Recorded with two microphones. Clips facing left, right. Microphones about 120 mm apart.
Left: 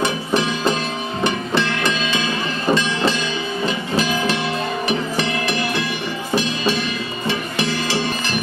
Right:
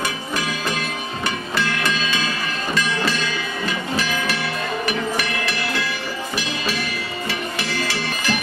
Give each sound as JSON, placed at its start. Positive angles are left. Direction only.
{"t": 0.0, "sound": "music", "side_deg": 25}
{"t": 3.6, "sound": "train", "side_deg": 25}
{"t": 4.8, "sound": "music", "side_deg": 25}